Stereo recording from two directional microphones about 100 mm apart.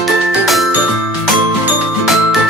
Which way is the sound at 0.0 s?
Centre (ahead or behind).